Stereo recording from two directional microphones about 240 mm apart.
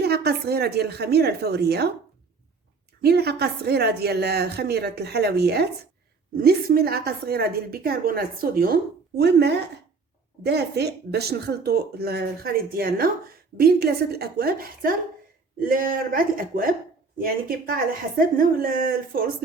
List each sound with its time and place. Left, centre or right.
0.0 s a woman's voice: right
3.0 s a woman's voice: right